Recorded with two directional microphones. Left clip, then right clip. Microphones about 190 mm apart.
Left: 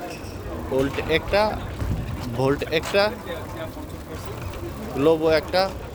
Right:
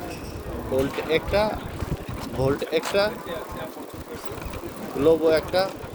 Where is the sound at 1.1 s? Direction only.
40° left (ahead or behind).